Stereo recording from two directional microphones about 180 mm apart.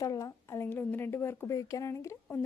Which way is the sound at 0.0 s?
20° left (ahead or behind).